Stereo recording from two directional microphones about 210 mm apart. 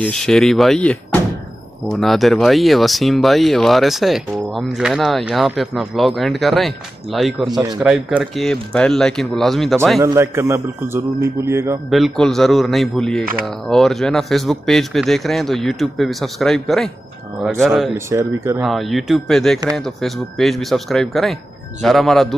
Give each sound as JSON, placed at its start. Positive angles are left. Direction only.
{"t": 0.0, "sound": "speech", "side_deg": 5}
{"t": 7.4, "sound": "speech", "side_deg": -20}
{"t": 7.8, "sound": "speech", "side_deg": 0}
{"t": 10.0, "sound": "a man's voice", "side_deg": -10}
{"t": 11.9, "sound": "speech", "side_deg": 0}
{"t": 17.9, "sound": "a man's voice", "side_deg": -15}
{"t": 18.6, "sound": "speech", "side_deg": 0}